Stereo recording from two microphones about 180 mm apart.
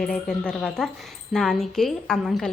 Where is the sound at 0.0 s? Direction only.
5° left (ahead or behind).